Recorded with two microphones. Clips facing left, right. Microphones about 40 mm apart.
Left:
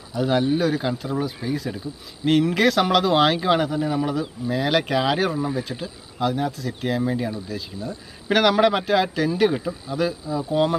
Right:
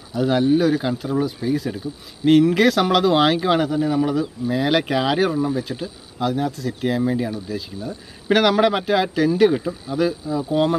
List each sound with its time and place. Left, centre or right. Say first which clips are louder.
0.1 s speech: right 3 dB; centre